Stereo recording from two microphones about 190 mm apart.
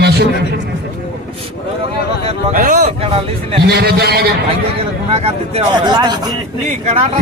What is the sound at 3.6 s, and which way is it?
Speech, 55° right (ahead or behind).